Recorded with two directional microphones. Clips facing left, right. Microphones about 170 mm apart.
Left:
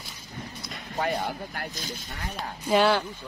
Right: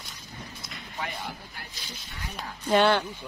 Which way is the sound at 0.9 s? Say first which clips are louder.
Left 8 dB; 50° left (ahead or behind).